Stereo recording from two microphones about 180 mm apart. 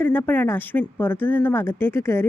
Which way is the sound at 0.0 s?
10° left (ahead or behind).